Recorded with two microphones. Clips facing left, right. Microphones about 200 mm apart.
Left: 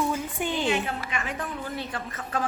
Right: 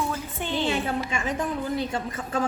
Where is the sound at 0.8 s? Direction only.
30° right (ahead or behind).